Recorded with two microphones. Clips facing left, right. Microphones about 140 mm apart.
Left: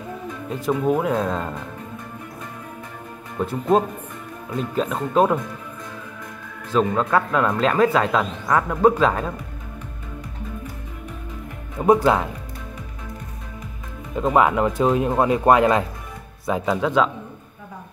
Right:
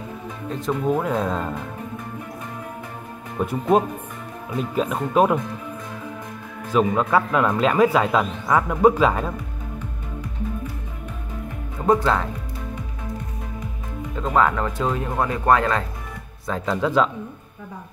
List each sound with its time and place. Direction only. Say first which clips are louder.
0.5 s speech: left 2 dB; 5° left (ahead or behind)
3.3 s speech: even; 10° right (ahead or behind)
6.7 s speech: even; 10° right (ahead or behind)
11.8 s speech: left 3 dB; 15° left (ahead or behind)
14.1 s speech: left 2 dB; 15° left (ahead or behind)